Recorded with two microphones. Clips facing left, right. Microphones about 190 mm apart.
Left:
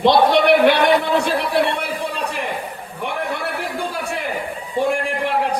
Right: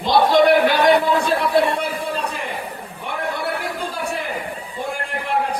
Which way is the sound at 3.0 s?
70° left (ahead or behind).